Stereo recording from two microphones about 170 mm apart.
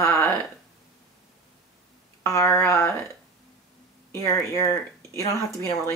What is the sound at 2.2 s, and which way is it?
Speech, 20° left (ahead or behind).